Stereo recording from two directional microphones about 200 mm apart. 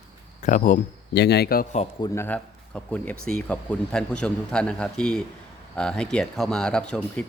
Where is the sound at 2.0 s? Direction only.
15° left (ahead or behind).